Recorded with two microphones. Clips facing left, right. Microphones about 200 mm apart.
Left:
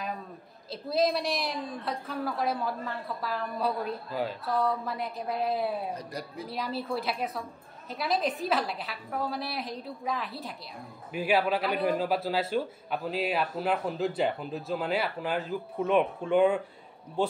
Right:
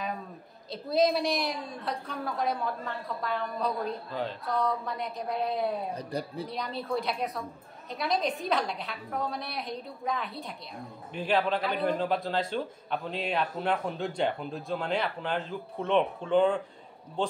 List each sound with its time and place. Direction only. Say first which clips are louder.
0.7 s a woman's voice: right 1 dB; centre (ahead or behind)
5.9 s speech: right 4 dB; 30° right (ahead or behind)
6.5 s a woman's voice: left 1 dB; 5° left (ahead or behind)